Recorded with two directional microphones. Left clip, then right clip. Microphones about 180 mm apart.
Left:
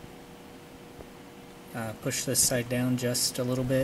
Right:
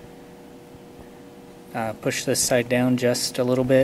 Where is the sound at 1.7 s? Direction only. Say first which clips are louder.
Right 8 dB; 5° right (ahead or behind).